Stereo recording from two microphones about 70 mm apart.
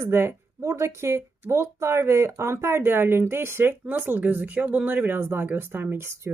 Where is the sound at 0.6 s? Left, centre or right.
Right.